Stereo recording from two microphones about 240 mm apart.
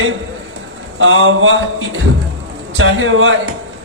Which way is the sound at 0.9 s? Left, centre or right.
Right.